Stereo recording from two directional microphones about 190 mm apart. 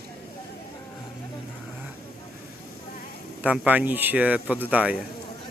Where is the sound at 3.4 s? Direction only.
5° right (ahead or behind).